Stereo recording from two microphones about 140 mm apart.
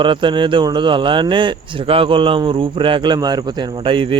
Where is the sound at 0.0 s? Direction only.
35° right (ahead or behind).